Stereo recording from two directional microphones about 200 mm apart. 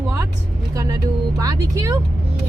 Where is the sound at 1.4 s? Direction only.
15° right (ahead or behind).